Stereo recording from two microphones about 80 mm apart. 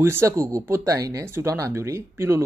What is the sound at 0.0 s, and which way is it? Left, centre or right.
Speech, right.